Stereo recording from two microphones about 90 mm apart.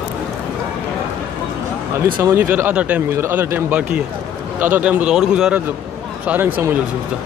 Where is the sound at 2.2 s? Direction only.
25° right (ahead or behind); by 5.6 s 10° right (ahead or behind).